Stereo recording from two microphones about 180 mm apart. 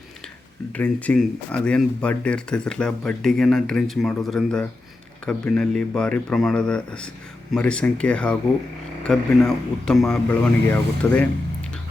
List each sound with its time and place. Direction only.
0.7 s speech: 10° left (ahead or behind)